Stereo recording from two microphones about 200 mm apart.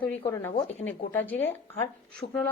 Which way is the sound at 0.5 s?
30° left (ahead or behind).